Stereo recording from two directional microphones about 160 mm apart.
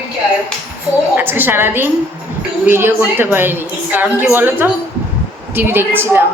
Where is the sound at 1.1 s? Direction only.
15° right (ahead or behind).